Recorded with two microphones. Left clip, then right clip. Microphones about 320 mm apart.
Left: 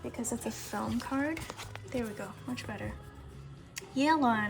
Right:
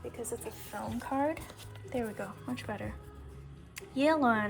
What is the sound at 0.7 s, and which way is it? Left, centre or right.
Speech, centre.